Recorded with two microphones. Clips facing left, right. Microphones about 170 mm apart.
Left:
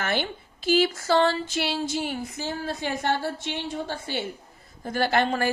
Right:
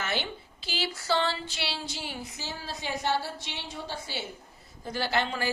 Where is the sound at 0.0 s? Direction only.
50° left (ahead or behind).